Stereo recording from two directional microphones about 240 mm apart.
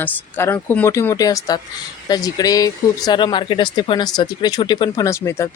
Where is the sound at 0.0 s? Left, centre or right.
Centre.